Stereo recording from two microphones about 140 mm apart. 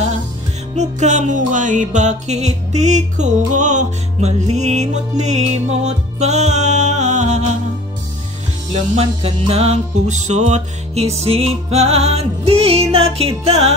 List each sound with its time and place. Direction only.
0.7 s music: 55° right (ahead or behind)
8.9 s music: 45° right (ahead or behind)